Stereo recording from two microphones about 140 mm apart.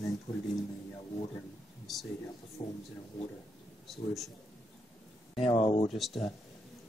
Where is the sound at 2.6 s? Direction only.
30° left (ahead or behind).